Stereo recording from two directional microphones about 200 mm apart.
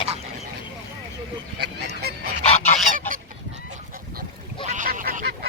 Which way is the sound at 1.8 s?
50° right (ahead or behind).